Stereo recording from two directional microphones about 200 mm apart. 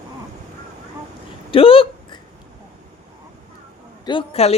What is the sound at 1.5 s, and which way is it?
Hiccup, 25° left (ahead or behind).